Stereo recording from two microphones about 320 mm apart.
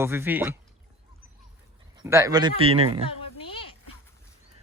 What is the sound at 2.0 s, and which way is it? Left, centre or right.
Speech, centre.